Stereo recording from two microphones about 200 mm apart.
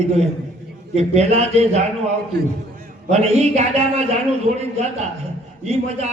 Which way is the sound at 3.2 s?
30° right (ahead or behind).